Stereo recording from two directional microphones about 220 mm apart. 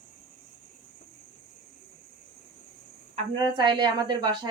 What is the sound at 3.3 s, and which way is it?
A woman's voice, 20° right (ahead or behind).